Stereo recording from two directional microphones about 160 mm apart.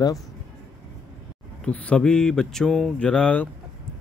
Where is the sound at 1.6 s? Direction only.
10° left (ahead or behind).